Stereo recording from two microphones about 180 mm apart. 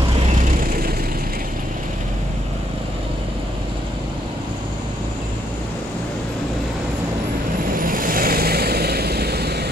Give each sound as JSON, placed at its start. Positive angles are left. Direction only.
{"t": 7.7, "sound": "vehicle", "side_deg": -50}